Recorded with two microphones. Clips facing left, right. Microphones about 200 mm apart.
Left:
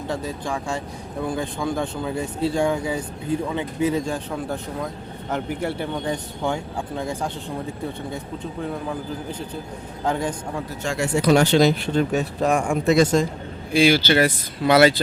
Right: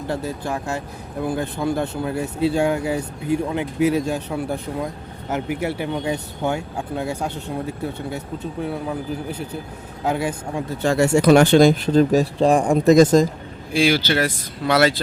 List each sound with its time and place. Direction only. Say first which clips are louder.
0.1 s speech: right 2 dB; 10° right (ahead or behind)
10.0 s speech: right 2 dB; 10° right (ahead or behind)
10.8 s speech: right 7 dB; 40° right (ahead or behind)
11.3 s speech: right 3 dB; 50° right (ahead or behind)
13.7 s speech: left 2 dB; centre (ahead or behind)